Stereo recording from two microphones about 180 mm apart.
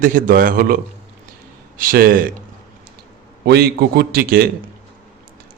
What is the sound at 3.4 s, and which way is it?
Speech, 65° right (ahead or behind).